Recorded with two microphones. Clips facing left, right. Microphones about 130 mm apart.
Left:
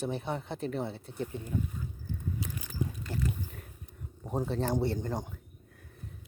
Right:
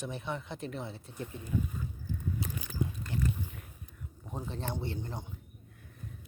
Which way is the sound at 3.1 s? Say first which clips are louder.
Even; 40° left (ahead or behind).